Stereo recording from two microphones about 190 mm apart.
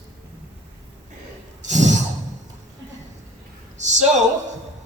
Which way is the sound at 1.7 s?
40° right (ahead or behind).